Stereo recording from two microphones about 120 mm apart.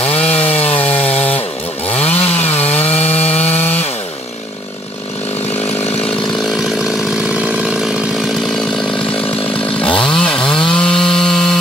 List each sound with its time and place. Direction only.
0.1 s chainsaw: 10° left (ahead or behind)
0.5 s wood: 55° left (ahead or behind)
0.7 s chainsaw: 15° left (ahead or behind)
1.9 s chainsaw: 60° left (ahead or behind)
2.8 s wood: 60° left (ahead or behind)
3.1 s wood: 15° left (ahead or behind)
3.5 s chainsaw: 15° left (ahead or behind)
7.3 s chainsaw: 10° right (ahead or behind)
10.0 s chainsaw: 5° left (ahead or behind)
10.4 s chainsaw: 45° left (ahead or behind)
10.7 s chainsaw: 5° left (ahead or behind)